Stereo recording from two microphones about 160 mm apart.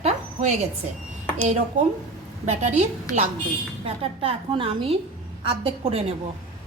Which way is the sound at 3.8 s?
35° right (ahead or behind).